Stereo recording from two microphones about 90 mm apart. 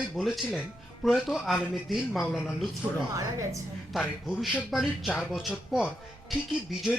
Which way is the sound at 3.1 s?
35° right (ahead or behind).